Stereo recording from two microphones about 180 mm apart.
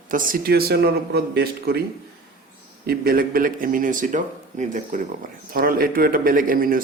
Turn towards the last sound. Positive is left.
turn(degrees=-50)  # may be behind; listen again after turning